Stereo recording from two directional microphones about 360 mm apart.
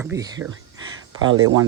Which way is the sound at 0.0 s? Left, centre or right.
Centre.